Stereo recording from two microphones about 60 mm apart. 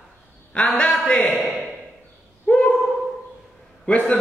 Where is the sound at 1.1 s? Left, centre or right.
Left.